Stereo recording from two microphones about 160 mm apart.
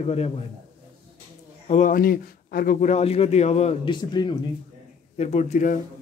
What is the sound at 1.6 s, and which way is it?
Speech, 50° left (ahead or behind).